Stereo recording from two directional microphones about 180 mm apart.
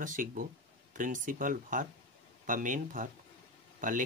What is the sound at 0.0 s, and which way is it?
Speech, 50° right (ahead or behind).